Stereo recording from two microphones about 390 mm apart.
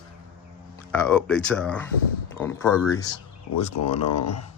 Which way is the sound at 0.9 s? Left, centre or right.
Centre.